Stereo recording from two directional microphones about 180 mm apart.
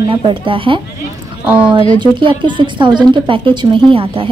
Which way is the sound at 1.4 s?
5° right (ahead or behind).